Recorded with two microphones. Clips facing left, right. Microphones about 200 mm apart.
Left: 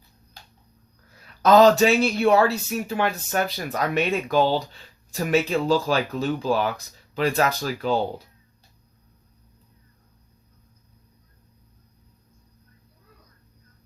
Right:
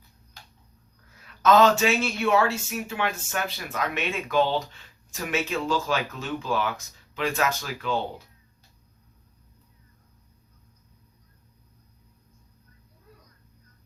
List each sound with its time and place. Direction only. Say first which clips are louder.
1.4 s speech: left 4 dB; 35° left (ahead or behind)